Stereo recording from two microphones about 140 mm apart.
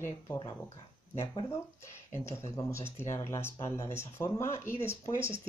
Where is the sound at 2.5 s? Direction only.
20° left (ahead or behind).